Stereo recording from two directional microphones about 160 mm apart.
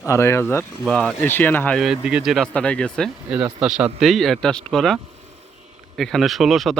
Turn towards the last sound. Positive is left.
turn(degrees=0)  # may be behind; listen again after turning